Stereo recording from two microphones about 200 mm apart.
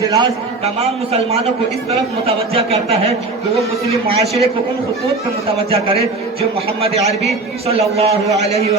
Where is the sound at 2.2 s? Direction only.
30° right (ahead or behind).